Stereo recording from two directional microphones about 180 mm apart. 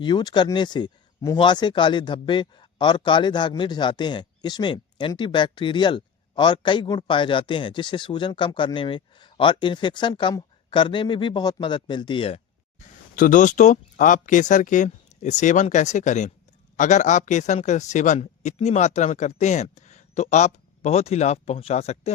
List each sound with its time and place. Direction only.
0.0 s speech: 25° left (ahead or behind)
13.1 s a man's voice: 45° left (ahead or behind)